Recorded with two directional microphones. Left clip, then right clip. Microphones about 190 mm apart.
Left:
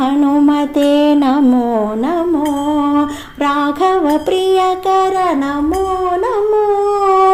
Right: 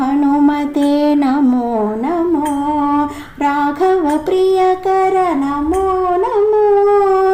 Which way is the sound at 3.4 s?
25° left (ahead or behind).